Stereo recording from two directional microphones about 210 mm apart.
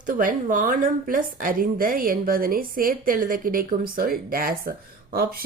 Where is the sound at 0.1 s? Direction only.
40° right (ahead or behind).